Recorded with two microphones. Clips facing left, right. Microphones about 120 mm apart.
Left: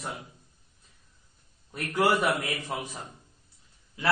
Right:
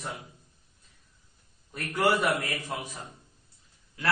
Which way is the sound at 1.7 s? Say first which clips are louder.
Left 1 dB; 10° left (ahead or behind).